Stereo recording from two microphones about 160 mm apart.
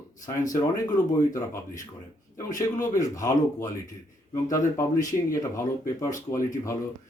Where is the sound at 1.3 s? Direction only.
20° left (ahead or behind).